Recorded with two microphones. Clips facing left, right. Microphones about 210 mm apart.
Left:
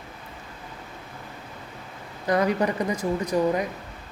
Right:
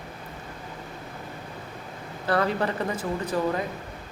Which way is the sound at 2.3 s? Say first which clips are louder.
Left 2 dB; 15° left (ahead or behind).